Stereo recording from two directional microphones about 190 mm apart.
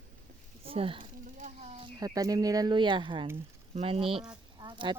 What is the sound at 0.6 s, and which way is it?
Speech, 30° right (ahead or behind).